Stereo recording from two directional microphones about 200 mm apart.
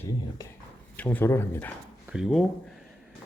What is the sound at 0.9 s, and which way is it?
Speech, 10° left (ahead or behind).